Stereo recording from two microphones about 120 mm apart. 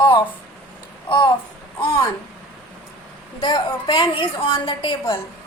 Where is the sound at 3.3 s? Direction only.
40° left (ahead or behind).